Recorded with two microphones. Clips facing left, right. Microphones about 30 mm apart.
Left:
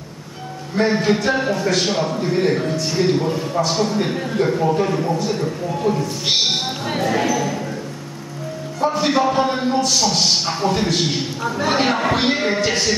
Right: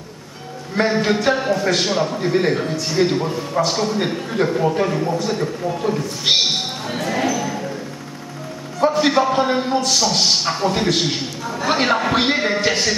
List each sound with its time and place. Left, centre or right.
0.8 s a man's voice: centre
1.3 s a man's voice: centre
7.0 s basketball bounce: centre
8.9 s a man's voice: centre
11.4 s speech: centre
11.7 s a man's voice: centre